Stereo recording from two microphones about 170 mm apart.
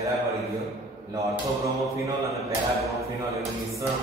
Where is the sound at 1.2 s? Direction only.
20° right (ahead or behind).